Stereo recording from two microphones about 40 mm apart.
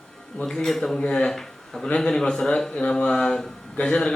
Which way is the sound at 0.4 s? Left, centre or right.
Centre.